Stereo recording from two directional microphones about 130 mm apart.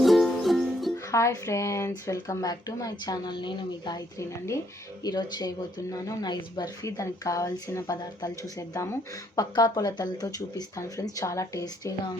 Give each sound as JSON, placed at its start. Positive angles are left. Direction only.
{"t": 0.0, "sound": "music", "side_deg": 0}
{"t": 1.1, "sound": "speech", "side_deg": 25}